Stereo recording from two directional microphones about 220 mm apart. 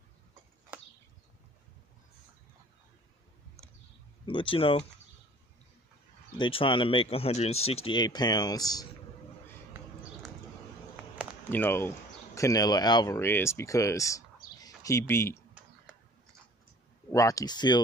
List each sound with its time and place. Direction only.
4.3 s speech: 25° left (ahead or behind)
6.3 s speech: 20° left (ahead or behind)
11.2 s a sound: 5° right (ahead or behind)
11.5 s speech: 10° left (ahead or behind)
15.9 s a sound: 5° right (ahead or behind)
17.1 s speech: 15° left (ahead or behind)